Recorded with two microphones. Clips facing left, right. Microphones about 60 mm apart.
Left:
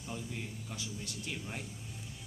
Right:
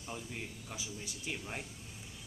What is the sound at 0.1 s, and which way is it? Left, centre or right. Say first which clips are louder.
Speech: left 1 dB; centre.